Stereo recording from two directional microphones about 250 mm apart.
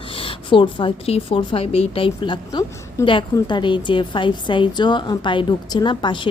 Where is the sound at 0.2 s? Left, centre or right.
Left.